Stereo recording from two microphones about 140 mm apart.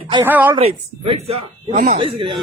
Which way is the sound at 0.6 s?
45° right (ahead or behind).